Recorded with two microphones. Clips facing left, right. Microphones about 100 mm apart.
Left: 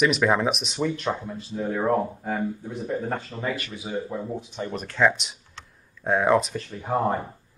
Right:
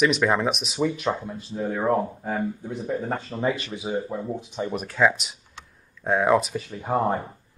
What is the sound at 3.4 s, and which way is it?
Speech, 25° right (ahead or behind).